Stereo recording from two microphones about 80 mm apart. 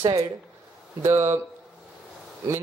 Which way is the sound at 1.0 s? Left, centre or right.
Right.